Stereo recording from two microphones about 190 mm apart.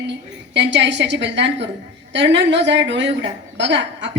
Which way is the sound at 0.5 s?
65° right (ahead or behind).